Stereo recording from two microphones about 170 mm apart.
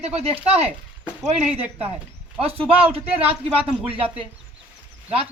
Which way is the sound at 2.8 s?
35° right (ahead or behind).